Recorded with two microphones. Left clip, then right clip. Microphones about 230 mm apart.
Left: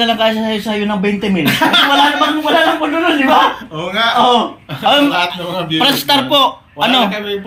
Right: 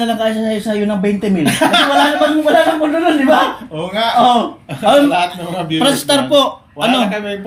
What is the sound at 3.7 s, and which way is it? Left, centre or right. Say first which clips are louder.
Speech: right 2 dB; centre.